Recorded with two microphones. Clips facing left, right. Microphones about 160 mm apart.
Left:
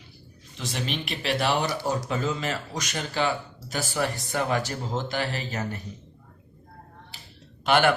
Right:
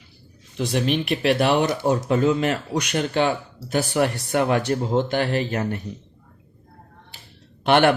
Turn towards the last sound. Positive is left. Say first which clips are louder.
# right 4 dB
turn(degrees=-60)  # may be behind; listen again after turning